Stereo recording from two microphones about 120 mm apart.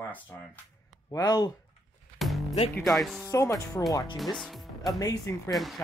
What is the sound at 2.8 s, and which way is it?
Speech, centre (ahead or behind).